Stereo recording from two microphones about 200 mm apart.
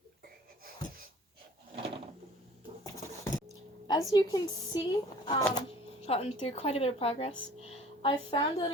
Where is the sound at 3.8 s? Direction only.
20° left (ahead or behind).